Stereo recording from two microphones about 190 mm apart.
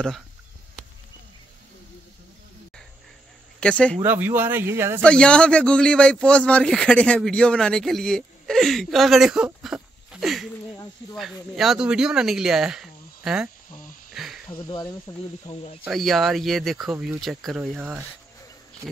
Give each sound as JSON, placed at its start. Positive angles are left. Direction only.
{"t": 3.5, "sound": "speech", "side_deg": 5}
{"t": 4.0, "sound": "speech", "side_deg": -10}
{"t": 5.0, "sound": "a man's voice", "side_deg": 5}
{"t": 14.1, "sound": "a sound", "side_deg": 0}
{"t": 14.5, "sound": "speech", "side_deg": 25}
{"t": 15.8, "sound": "a man's voice", "side_deg": 0}